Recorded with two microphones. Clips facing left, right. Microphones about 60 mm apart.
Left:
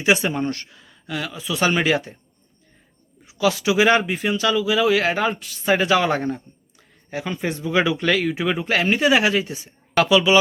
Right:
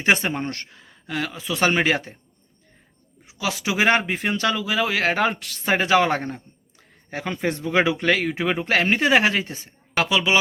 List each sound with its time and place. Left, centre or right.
0.0 s speech: right
3.2 s speech: right
5.6 s speech: right
7.1 s speech: right
7.6 s speech: right
8.6 s speech: right
9.9 s speech: right